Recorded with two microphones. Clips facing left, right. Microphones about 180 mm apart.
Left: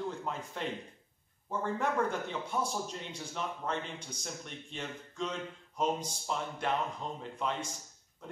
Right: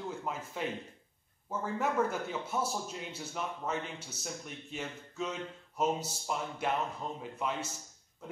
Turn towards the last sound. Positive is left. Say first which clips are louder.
# even
turn(degrees=-5)  # may be behind; listen again after turning